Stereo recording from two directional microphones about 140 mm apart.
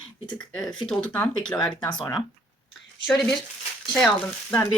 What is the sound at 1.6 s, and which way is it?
Speech, 35° left (ahead or behind).